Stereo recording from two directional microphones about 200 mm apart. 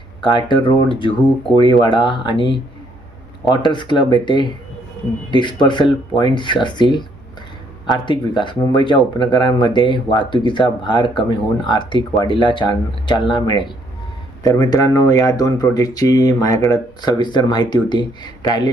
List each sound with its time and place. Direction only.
0.2 s speech: 25° left (ahead or behind)
1.5 s speech: 25° left (ahead or behind)